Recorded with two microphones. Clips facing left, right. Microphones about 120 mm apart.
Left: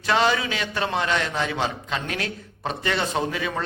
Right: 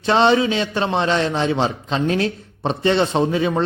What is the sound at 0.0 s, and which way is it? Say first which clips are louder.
A man's voice: right 6 dB; 30° right (ahead or behind).